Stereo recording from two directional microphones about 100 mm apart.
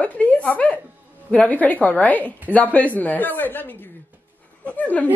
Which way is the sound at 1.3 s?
15° left (ahead or behind).